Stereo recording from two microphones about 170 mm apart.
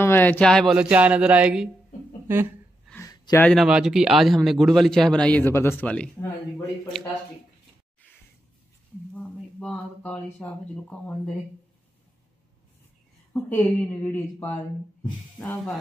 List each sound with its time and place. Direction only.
0.0 s speech: 10° left (ahead or behind)
0.7 s speech: 5° right (ahead or behind)
2.9 s a sound: 20° left (ahead or behind)
3.4 s a man's voice: centre (ahead or behind)
9.1 s speech: 5° left (ahead or behind)
13.3 s speech: 10° left (ahead or behind)